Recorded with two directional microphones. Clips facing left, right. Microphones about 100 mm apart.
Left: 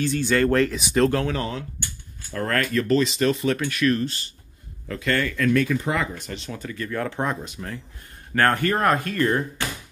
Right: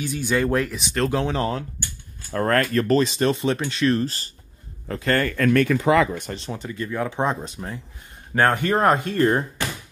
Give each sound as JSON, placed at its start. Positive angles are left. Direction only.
{"t": 0.0, "sound": "speech", "side_deg": -15}
{"t": 0.7, "sound": "speech", "side_deg": 5}
{"t": 1.1, "sound": "speech", "side_deg": -20}
{"t": 2.3, "sound": "speech", "side_deg": -40}
{"t": 5.9, "sound": "speech", "side_deg": -80}
{"t": 6.3, "sound": "speech", "side_deg": -35}
{"t": 6.6, "sound": "speech", "side_deg": -20}